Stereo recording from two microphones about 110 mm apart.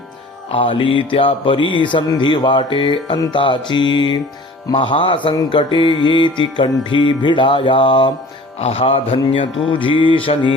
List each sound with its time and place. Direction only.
0.5 s mantra: 50° left (ahead or behind)
8.5 s music: 65° left (ahead or behind)
9.1 s mantra: 50° left (ahead or behind)